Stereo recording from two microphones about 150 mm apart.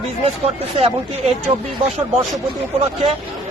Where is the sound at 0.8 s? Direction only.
40° right (ahead or behind).